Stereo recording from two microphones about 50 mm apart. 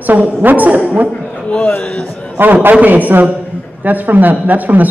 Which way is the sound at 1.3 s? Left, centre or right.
Left.